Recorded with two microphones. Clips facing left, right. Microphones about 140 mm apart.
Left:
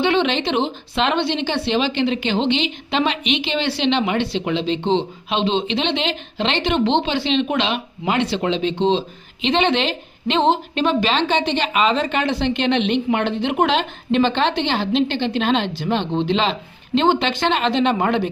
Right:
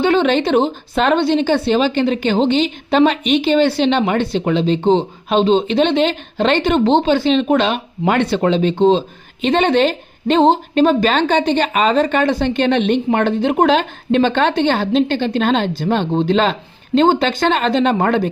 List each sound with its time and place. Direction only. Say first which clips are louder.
0.0 s a woman's voice: right 4 dB; 45° right (ahead or behind)